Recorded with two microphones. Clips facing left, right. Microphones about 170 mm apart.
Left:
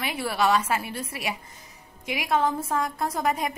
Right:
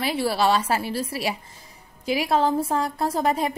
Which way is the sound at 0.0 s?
30° right (ahead or behind).